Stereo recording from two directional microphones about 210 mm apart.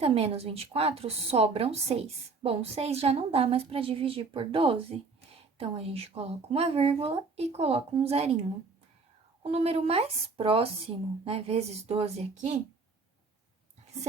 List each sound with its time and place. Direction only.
0.0 s a woman's voice: 30° right (ahead or behind)